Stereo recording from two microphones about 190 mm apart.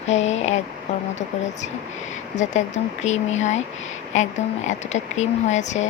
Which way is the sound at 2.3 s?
40° left (ahead or behind).